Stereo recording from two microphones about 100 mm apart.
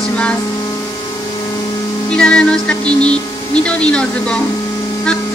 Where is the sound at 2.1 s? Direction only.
10° left (ahead or behind).